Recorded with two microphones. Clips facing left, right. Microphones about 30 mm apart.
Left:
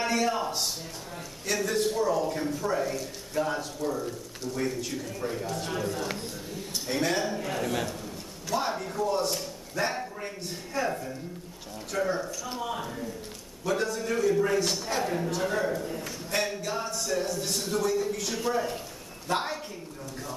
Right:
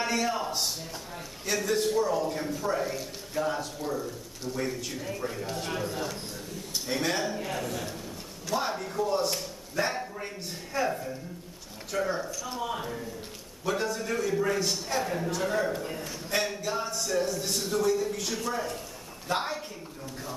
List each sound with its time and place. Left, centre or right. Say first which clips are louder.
0.0 s a man's voice: left 2 dB; centre
15.7 s a man's voice: left 2 dB; right
16.3 s a man's voice: even; centre